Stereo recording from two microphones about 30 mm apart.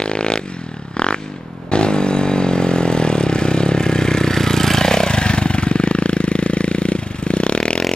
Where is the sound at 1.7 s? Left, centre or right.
Left.